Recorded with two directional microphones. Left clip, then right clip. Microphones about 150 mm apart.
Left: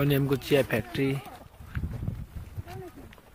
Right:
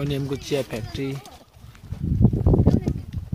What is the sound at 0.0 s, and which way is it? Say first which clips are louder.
Speech: left 1 dB; 5° right (ahead or behind).